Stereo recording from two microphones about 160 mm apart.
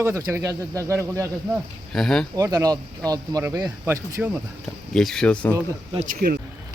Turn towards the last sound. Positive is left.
turn(degrees=-70)  # may be behind; listen again after turning